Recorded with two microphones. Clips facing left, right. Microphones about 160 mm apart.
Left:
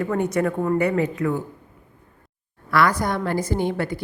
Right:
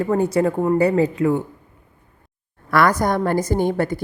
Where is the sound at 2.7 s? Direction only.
45° right (ahead or behind).